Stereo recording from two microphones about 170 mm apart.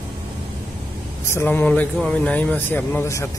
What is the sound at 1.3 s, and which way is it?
Speech, 10° left (ahead or behind).